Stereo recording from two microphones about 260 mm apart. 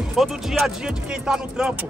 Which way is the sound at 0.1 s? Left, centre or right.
Centre.